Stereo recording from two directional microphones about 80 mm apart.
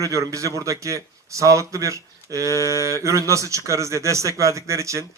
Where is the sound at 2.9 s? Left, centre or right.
Right.